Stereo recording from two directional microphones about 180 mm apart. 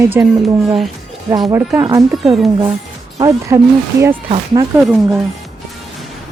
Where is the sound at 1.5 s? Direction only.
15° right (ahead or behind).